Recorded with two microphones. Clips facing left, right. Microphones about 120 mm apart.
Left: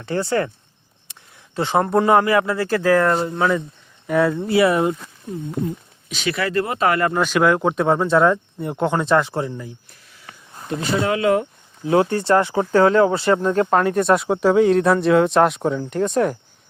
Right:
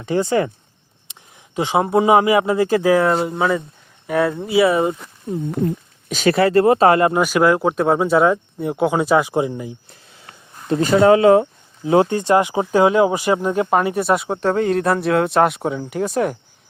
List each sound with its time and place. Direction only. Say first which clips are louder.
0.0 s speech: right 3 dB; 15° right (ahead or behind)
1.1 s a sound: right 1 dB; 15° right (ahead or behind)
1.5 s speech: right 1 dB; 10° right (ahead or behind)
6.1 s speech: right 8 dB; 45° right (ahead or behind)
7.1 s speech: right 2 dB; 10° right (ahead or behind)
10.8 s speech: right 8 dB; 35° right (ahead or behind); by 16.4 s 5° right (ahead or behind)